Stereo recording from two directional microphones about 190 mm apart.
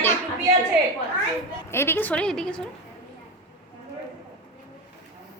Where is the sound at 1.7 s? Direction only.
10° left (ahead or behind).